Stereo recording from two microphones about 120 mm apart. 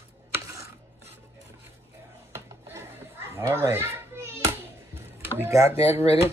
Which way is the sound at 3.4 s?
25° right (ahead or behind).